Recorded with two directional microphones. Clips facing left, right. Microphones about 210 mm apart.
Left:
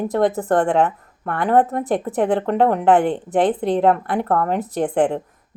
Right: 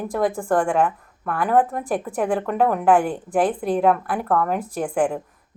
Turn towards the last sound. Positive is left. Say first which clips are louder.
# left 3 dB
turn(degrees=25)  # may be behind; listen again after turning